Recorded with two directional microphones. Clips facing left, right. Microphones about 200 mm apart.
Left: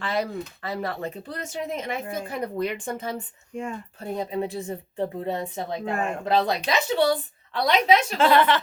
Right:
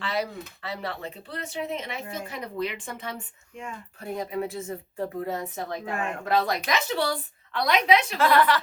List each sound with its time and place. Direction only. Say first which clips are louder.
0.0 s speech: left 3 dB; 50° left (ahead or behind); by 7.2 s 20° left (ahead or behind)
7.5 s speech: left 2 dB; 35° left (ahead or behind)
8.2 s speech: left 2 dB; 25° left (ahead or behind)